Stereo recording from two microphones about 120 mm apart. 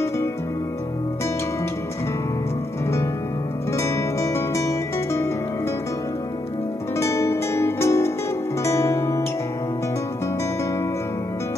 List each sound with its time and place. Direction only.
3.7 s guitar: 25° left (ahead or behind)
7.0 s music: 25° left (ahead or behind)
8.6 s guitar: 25° left (ahead or behind)